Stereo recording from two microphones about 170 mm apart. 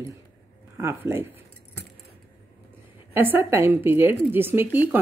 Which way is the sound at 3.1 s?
10° right (ahead or behind).